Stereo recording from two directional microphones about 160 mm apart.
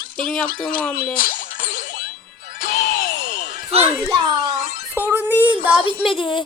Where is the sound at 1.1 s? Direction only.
60° left (ahead or behind).